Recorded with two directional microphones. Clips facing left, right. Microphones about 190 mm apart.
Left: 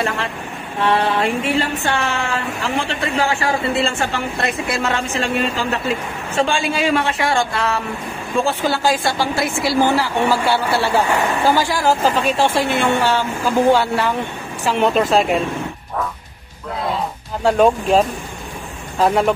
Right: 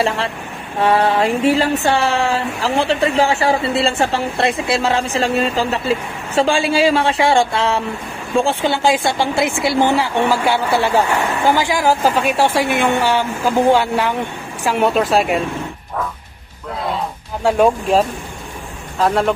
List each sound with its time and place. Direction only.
1.2 s a woman's voice: 35° right (ahead or behind); by 15.4 s 5° right (ahead or behind)
16.8 s a sound: 5° right (ahead or behind)
19.0 s speech: 5° left (ahead or behind)